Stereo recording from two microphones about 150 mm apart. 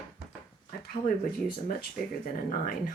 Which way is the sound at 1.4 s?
70° left (ahead or behind).